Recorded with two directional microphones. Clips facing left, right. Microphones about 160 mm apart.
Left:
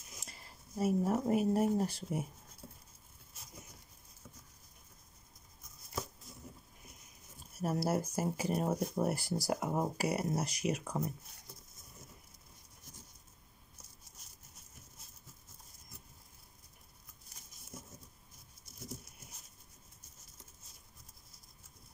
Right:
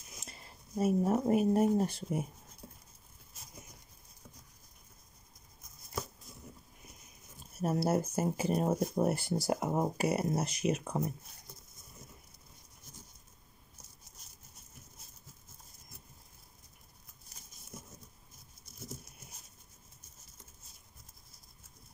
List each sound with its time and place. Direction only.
0.2 s speech: 20° right (ahead or behind)
7.6 s speech: 25° right (ahead or behind)